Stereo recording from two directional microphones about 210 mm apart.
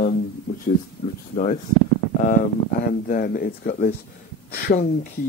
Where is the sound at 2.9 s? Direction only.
40° left (ahead or behind).